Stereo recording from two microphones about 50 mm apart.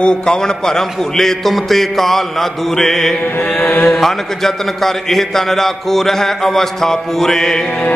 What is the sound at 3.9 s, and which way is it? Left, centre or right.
A man's voice, centre.